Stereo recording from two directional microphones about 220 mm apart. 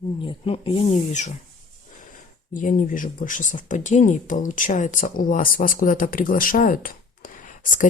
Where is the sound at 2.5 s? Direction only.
40° left (ahead or behind).